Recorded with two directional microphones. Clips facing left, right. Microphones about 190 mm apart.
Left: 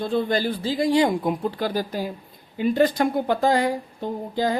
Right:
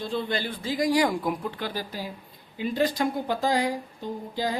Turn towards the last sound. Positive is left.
turn(degrees=55)  # may be behind; listen again after turning